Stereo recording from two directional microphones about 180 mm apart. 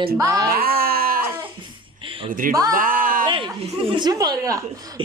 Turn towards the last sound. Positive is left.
turn(degrees=-20)  # may be behind; listen again after turning